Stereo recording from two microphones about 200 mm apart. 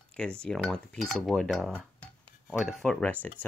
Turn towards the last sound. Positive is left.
turn(degrees=5)  # may be behind; listen again after turning